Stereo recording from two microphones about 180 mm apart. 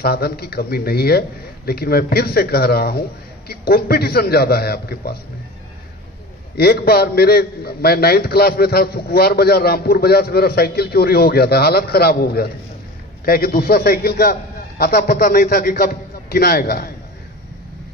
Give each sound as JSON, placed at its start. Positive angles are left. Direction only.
{"t": 0.0, "sound": "a man's voice", "side_deg": 60}
{"t": 6.5, "sound": "a man's voice", "side_deg": 60}